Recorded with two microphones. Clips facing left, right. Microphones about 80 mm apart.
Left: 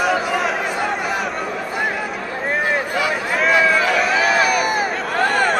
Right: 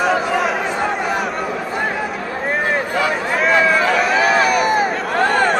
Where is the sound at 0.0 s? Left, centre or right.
Centre.